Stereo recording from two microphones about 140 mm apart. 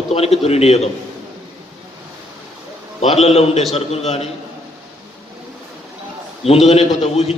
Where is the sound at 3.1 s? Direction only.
45° left (ahead or behind).